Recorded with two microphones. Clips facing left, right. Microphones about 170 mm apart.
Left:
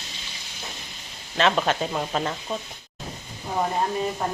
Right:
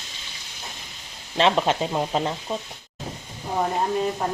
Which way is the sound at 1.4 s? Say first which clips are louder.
Right 2 dB; 25° right (ahead or behind).